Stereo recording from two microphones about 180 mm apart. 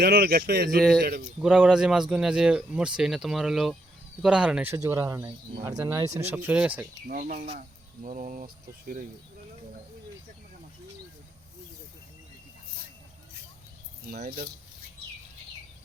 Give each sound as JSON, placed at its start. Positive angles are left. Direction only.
{"t": 0.0, "sound": "speech", "side_deg": -60}
{"t": 1.4, "sound": "speech", "side_deg": -5}
{"t": 7.1, "sound": "speech", "side_deg": -50}